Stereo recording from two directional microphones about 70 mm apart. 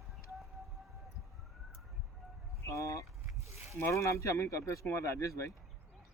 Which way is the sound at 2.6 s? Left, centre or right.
Left.